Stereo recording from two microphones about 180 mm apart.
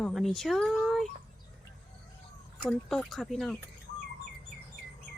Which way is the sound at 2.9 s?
Centre (ahead or behind).